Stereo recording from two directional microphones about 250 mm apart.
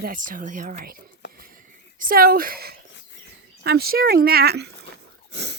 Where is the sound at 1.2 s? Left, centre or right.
Left.